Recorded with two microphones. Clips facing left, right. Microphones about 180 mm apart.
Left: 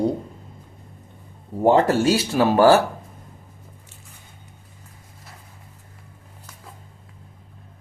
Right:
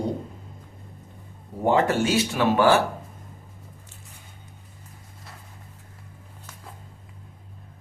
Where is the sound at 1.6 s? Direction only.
35° left (ahead or behind).